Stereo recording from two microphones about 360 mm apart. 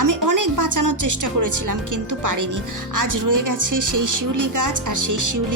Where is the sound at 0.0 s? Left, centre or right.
Right.